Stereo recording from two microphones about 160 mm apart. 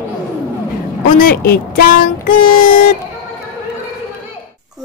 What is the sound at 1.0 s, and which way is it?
Speech, 65° left (ahead or behind).